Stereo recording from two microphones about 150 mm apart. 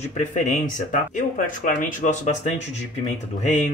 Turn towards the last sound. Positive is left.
turn(degrees=50)  # may be behind; listen again after turning